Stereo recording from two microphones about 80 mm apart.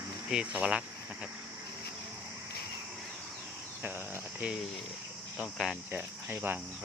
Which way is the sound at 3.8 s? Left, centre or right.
Right.